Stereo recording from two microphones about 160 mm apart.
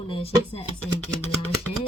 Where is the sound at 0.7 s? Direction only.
10° left (ahead or behind).